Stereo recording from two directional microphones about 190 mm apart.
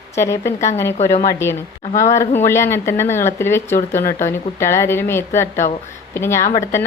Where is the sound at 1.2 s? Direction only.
15° left (ahead or behind).